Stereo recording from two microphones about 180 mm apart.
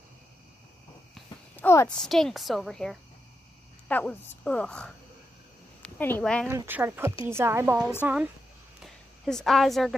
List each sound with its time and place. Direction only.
1.1 s a sound: 10° left (ahead or behind)
2.0 s a woman's voice: centre (ahead or behind)
5.9 s a woman's voice: 10° left (ahead or behind)
6.5 s a woman's voice: 15° right (ahead or behind)